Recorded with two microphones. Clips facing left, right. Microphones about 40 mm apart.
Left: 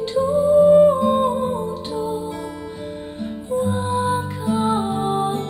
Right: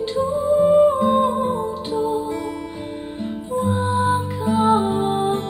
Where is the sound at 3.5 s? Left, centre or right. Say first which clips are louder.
Even; right.